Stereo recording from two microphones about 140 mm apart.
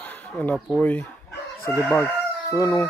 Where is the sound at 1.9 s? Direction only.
20° left (ahead or behind).